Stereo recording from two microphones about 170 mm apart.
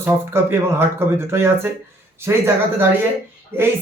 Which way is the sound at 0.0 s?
15° right (ahead or behind).